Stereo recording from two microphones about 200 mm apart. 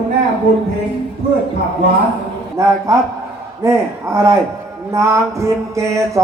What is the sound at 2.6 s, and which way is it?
A man's voice, 15° right (ahead or behind).